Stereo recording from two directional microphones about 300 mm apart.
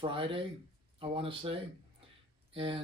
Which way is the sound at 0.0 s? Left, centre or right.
Centre.